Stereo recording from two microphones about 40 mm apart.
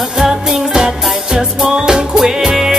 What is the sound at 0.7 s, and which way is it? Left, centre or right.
Music, centre.